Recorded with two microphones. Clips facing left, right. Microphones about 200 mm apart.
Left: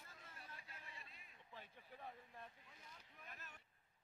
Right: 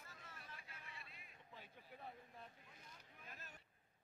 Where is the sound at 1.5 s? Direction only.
10° right (ahead or behind).